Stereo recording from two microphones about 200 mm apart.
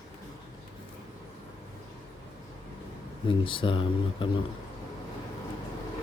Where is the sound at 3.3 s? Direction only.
25° left (ahead or behind).